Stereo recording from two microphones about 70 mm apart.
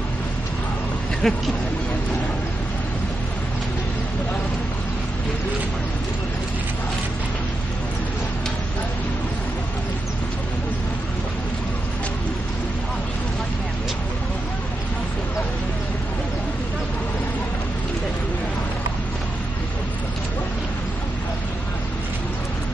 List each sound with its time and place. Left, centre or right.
1.2 s speech: centre